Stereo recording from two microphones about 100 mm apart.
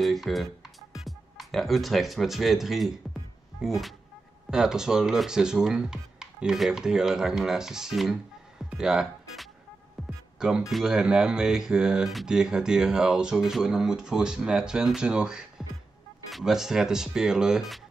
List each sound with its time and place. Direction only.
0.0 s speech: centre (ahead or behind)
10.0 s music: centre (ahead or behind)
10.7 s speech: 5° right (ahead or behind)